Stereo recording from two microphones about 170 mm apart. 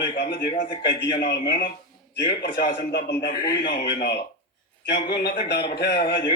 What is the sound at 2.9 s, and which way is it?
A man's voice, 80° left.